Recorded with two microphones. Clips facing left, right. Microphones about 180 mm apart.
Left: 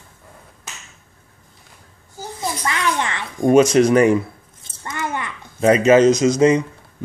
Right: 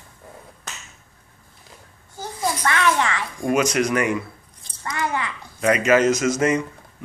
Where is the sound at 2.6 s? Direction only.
20° left (ahead or behind).